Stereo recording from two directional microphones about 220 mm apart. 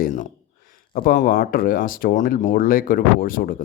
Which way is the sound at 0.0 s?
35° left (ahead or behind).